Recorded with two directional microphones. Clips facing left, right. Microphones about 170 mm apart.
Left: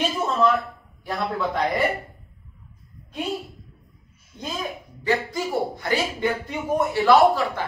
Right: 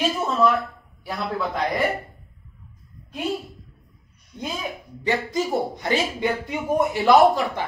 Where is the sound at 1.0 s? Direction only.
Centre (ahead or behind).